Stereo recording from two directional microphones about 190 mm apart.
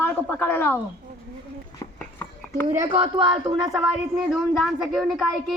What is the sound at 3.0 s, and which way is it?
Speech, 25° right (ahead or behind).